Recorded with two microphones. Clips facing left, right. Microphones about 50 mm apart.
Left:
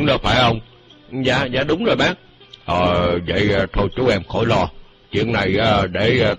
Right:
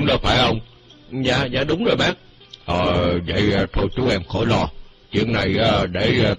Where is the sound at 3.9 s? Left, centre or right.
Left.